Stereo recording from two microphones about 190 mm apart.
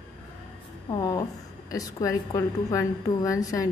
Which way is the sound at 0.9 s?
20° left (ahead or behind).